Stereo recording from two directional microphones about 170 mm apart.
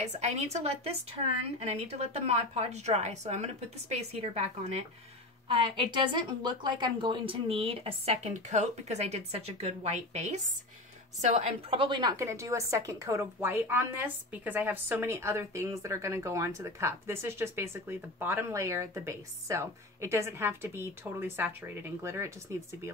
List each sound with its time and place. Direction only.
0.0 s a woman's voice: 40° right (ahead or behind); by 22.8 s 15° right (ahead or behind)